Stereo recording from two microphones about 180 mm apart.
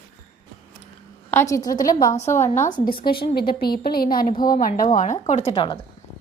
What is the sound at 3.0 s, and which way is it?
A woman's voice, 60° left (ahead or behind).